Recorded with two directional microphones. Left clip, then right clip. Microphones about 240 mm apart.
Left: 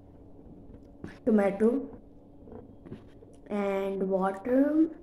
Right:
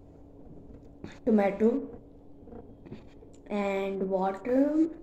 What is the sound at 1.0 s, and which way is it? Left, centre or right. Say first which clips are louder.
Speech: even; centre.